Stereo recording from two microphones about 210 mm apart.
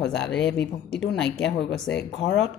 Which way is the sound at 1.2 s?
55° left (ahead or behind).